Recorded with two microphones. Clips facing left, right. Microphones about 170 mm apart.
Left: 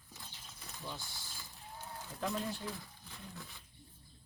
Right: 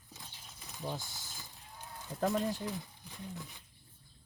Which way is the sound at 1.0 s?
20° right (ahead or behind).